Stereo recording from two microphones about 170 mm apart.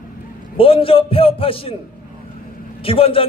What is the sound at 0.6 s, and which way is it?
A man's voice, 30° left (ahead or behind).